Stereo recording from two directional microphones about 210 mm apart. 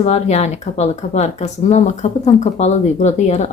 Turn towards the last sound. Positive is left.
turn(degrees=30)  # may be behind; listen again after turning